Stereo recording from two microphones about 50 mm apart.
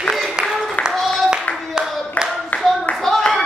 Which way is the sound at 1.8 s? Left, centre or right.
Centre.